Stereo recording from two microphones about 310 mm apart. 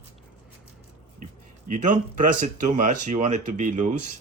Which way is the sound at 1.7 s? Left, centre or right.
Right.